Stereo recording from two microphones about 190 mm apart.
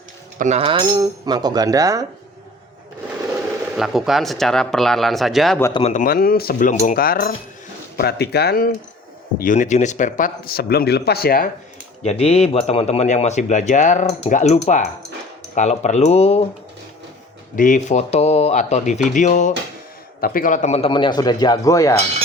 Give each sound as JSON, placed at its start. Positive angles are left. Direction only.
{"t": 0.3, "sound": "speech", "side_deg": -35}
{"t": 3.8, "sound": "speech", "side_deg": 0}
{"t": 5.9, "sound": "speech", "side_deg": 45}
{"t": 9.4, "sound": "speech", "side_deg": 40}
{"t": 12.0, "sound": "speech", "side_deg": 35}
{"t": 17.5, "sound": "speech", "side_deg": 45}